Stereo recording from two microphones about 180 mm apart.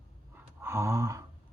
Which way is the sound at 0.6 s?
15° right (ahead or behind).